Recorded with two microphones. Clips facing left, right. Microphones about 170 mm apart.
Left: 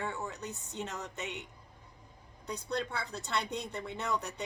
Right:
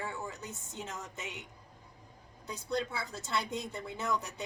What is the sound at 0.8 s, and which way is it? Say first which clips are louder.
Speech: left 2 dB; 70° left (ahead or behind).